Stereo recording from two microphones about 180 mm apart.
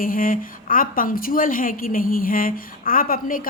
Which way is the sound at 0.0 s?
50° left (ahead or behind).